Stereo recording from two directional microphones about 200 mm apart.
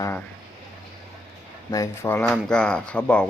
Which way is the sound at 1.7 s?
15° left (ahead or behind).